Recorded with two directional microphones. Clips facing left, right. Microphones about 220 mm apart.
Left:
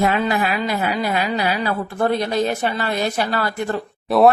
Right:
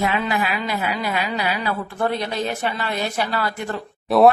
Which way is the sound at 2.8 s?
40° left (ahead or behind).